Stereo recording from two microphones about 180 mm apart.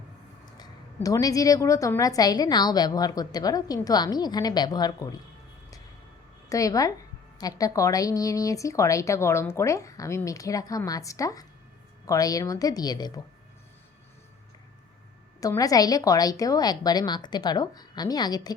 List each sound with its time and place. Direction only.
0.4 s a sound: 20° left (ahead or behind)
1.0 s a woman's voice: 20° left (ahead or behind)
6.5 s a woman's voice: 20° left (ahead or behind)
15.4 s a woman's voice: 20° left (ahead or behind)